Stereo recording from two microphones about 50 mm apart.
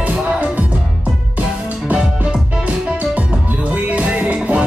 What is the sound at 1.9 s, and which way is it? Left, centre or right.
Music, right.